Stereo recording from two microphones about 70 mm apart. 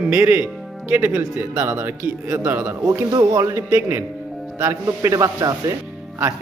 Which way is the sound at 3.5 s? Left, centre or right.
Right.